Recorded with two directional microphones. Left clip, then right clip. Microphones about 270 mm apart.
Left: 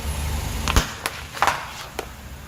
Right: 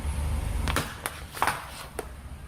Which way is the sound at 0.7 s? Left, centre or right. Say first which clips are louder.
Left 7 dB; centre.